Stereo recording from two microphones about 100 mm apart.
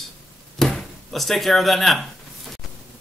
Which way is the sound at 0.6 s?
Centre (ahead or behind).